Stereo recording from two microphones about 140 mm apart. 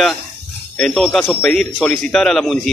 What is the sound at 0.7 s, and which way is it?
A man's voice, 5° left (ahead or behind).